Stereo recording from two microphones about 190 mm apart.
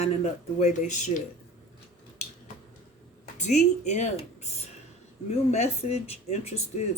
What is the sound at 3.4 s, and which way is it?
Speech, 40° left (ahead or behind).